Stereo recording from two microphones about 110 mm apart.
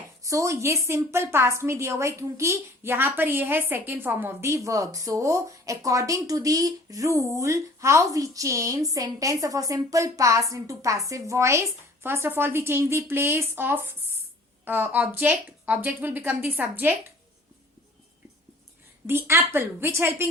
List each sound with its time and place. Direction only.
0.2 s a woman's voice: 30° right (ahead or behind)
19.0 s a woman's voice: 25° right (ahead or behind)